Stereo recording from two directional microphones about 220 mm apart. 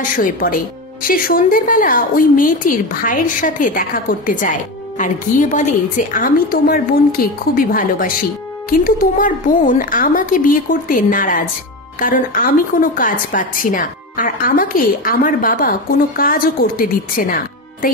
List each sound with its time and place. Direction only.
0.1 s a woman's voice: 40° left (ahead or behind)